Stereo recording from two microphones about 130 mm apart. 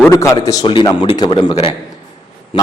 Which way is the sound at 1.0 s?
40° left (ahead or behind).